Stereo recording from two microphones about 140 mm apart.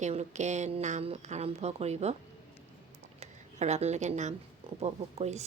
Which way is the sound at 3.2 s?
55° right (ahead or behind).